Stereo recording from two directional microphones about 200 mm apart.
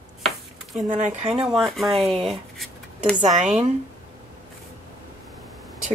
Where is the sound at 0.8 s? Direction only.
40° right (ahead or behind).